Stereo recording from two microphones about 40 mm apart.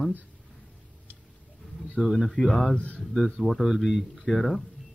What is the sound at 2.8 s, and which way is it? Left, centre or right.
Speech, left.